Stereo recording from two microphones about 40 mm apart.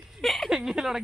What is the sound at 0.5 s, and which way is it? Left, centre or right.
Speech, centre.